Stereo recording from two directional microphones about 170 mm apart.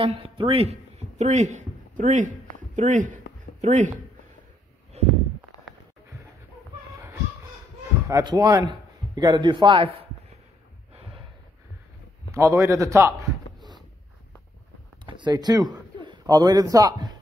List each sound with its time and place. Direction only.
0.0 s speech: 35° right (ahead or behind)
4.9 s a sound: 40° right (ahead or behind)
8.1 s speech: 25° right (ahead or behind)
12.3 s a man's voice: 20° right (ahead or behind)
15.0 s a man's voice: 25° right (ahead or behind)